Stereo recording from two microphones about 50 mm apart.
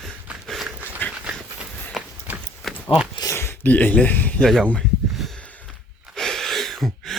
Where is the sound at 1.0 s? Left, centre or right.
Left.